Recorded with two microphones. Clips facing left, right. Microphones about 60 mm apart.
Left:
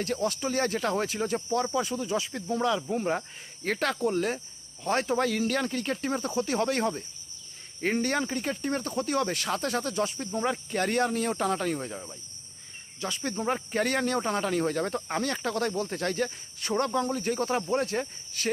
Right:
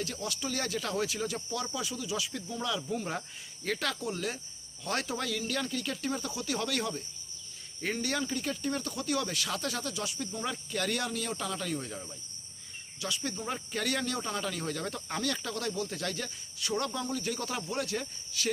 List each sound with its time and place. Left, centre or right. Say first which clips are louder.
0.0 s speech: left 7 dB; left
11.9 s cricket: left 3 dB; left
13.0 s speech: left 4 dB; left